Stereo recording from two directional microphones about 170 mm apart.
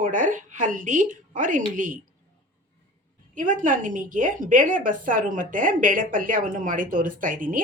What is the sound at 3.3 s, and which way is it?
A woman's voice, 50° right (ahead or behind).